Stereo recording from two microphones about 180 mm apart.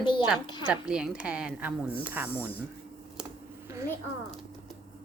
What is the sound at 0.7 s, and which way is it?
Speech, 5° right (ahead or behind).